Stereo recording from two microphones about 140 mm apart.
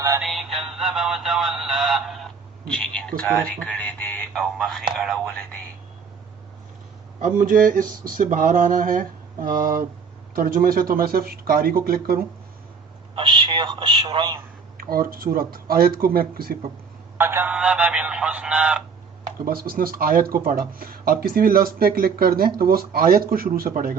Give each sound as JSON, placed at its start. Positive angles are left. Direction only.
{"t": 0.2, "sound": "music", "side_deg": 0}
{"t": 2.7, "sound": "speech", "side_deg": 5}
{"t": 7.2, "sound": "a sound", "side_deg": -65}
{"t": 10.3, "sound": "speech", "side_deg": -90}
{"t": 13.1, "sound": "speech", "side_deg": -35}
{"t": 14.8, "sound": "speech", "side_deg": -90}
{"t": 17.2, "sound": "speech", "side_deg": -15}
{"t": 19.5, "sound": "speech", "side_deg": -90}